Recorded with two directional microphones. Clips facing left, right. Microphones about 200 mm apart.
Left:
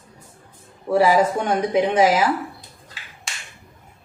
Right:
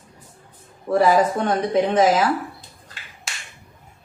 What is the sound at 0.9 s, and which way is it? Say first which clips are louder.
A woman's voice: even; 10° left (ahead or behind).